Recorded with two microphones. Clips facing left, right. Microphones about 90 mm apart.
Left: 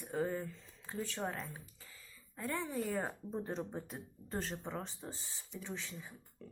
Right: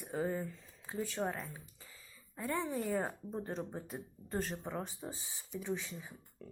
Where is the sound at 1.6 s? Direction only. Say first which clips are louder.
Even; 20° right (ahead or behind).